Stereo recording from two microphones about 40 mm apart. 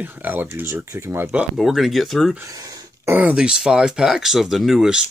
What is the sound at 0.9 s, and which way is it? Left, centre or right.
Speech, right.